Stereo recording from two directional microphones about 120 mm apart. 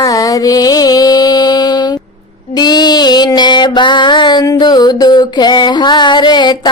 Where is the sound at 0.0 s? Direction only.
30° left (ahead or behind).